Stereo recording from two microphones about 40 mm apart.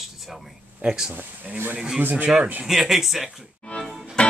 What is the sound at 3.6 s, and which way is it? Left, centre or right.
Music, left.